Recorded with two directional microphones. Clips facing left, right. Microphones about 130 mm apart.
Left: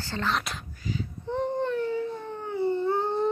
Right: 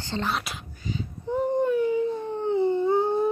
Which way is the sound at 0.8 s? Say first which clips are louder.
Right 1 dB; 25° right (ahead or behind).